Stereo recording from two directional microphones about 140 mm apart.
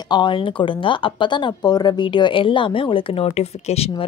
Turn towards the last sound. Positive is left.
turn(degrees=45)  # may be behind; listen again after turning